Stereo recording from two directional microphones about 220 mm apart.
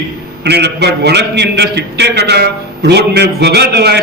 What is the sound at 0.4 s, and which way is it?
A man's voice, 50° right (ahead or behind).